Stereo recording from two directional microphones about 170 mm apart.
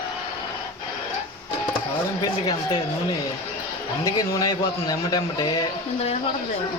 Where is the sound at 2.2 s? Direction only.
25° left (ahead or behind).